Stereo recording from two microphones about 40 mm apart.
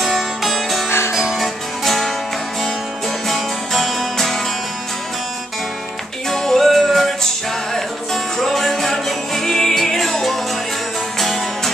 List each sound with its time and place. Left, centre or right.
0.0 s music: centre
0.8 s music: left
1.1 s music: centre
1.9 s music: centre
3.3 s music: centre
6.3 s music: centre